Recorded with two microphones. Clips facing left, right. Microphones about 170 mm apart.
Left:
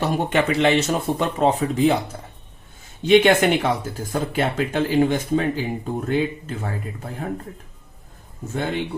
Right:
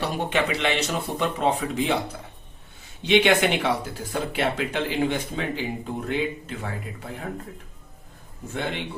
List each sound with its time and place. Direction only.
0.0 s speech: 45° left (ahead or behind)
3.0 s speech: 45° left (ahead or behind)
8.5 s speech: 40° left (ahead or behind)